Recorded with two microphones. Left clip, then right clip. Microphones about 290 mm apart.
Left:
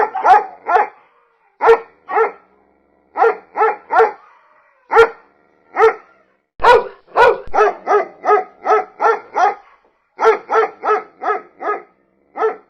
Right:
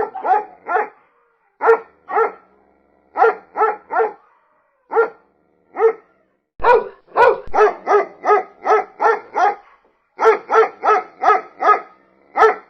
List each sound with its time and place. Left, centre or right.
0.0 s dog: left; by 3.9 s centre
3.9 s dog: left
4.9 s dog: left
6.6 s dog: centre; by 12.6 s right